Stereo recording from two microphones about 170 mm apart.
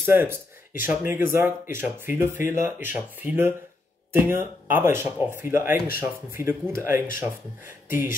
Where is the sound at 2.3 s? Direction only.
50° left (ahead or behind).